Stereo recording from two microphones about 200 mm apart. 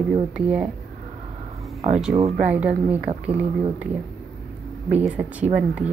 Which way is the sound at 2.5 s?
5° right (ahead or behind).